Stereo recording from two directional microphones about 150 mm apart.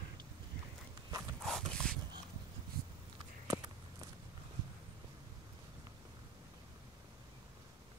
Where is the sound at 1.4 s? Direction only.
5° left (ahead or behind).